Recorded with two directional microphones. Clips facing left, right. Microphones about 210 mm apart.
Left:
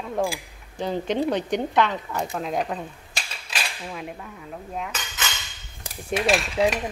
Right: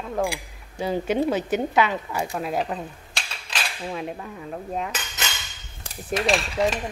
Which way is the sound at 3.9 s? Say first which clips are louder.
Right 4 dB; 30° right (ahead or behind).